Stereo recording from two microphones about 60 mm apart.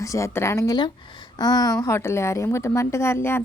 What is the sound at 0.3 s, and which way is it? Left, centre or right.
Speech, left.